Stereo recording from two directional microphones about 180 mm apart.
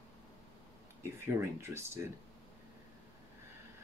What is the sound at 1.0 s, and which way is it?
Speech, 15° right (ahead or behind).